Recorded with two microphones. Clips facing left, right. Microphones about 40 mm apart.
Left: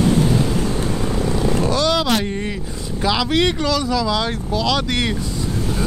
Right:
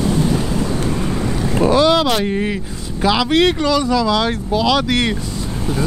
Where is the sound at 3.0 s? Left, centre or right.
Centre.